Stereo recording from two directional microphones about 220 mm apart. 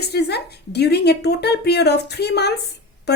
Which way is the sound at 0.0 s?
50° left (ahead or behind).